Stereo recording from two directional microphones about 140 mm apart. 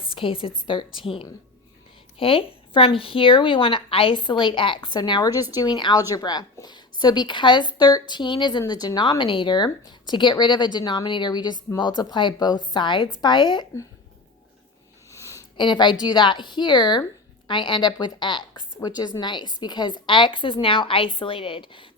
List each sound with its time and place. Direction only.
0.0 s a woman's voice: 40° left (ahead or behind)
15.1 s a sound: 20° left (ahead or behind)
15.5 s a woman's voice: 35° left (ahead or behind)